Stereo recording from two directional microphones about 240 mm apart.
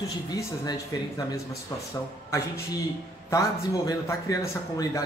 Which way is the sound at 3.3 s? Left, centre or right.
Centre.